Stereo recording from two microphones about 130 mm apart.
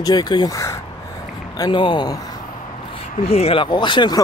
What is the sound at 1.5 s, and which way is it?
Speech, 35° left (ahead or behind).